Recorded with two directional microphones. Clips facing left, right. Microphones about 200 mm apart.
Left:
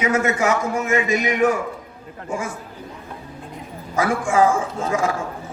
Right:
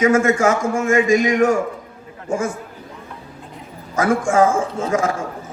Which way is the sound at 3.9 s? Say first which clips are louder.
Right 3 dB; 45° right (ahead or behind).